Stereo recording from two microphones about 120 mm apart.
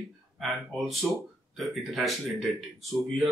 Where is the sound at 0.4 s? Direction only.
Centre (ahead or behind).